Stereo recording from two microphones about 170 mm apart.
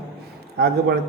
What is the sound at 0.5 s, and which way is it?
Speech, 70° right (ahead or behind).